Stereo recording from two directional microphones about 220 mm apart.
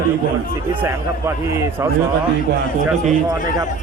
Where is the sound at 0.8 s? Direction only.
10° right (ahead or behind).